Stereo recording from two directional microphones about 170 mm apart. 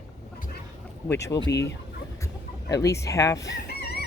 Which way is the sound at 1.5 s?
90° left.